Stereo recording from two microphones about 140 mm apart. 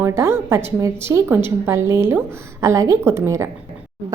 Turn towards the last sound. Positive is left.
turn(degrees=-20)  # may be behind; listen again after turning